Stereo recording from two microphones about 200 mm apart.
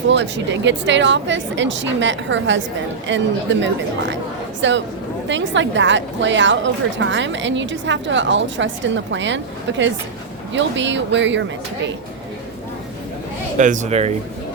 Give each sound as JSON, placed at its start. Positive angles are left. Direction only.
{"t": 0.1, "sound": "a woman's voice", "side_deg": -60}
{"t": 13.6, "sound": "speech", "side_deg": -40}